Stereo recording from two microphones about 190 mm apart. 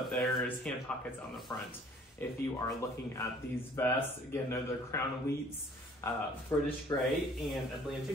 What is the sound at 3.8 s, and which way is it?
Speech, 10° left (ahead or behind).